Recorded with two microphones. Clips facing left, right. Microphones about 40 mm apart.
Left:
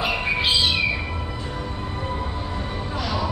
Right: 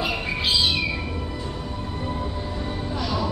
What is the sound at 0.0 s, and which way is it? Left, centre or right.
Cat, centre.